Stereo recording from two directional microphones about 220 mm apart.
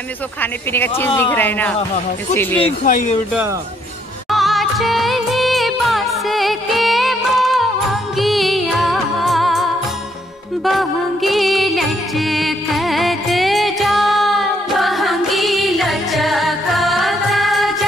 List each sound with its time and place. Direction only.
0.4 s speech: 10° left (ahead or behind)
2.8 s speech: 35° left (ahead or behind)
4.3 s music of bollywood: centre (ahead or behind)
10.6 s music: centre (ahead or behind)